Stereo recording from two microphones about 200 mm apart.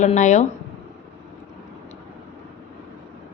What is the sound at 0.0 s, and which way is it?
Speech, 35° left (ahead or behind).